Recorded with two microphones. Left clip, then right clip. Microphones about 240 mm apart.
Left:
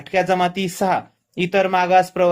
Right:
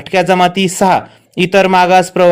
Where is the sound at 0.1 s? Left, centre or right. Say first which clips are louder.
Right 8 dB; right.